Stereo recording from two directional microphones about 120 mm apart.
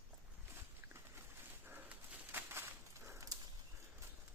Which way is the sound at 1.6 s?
15° right (ahead or behind).